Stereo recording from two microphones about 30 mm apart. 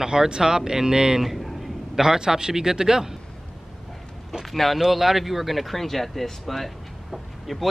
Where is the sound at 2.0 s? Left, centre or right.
Right.